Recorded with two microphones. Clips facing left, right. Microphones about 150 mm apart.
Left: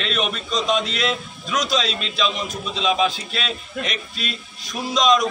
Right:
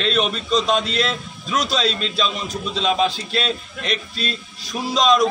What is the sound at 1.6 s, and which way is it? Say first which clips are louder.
A man's voice: right 1 dB; 30° right (ahead or behind).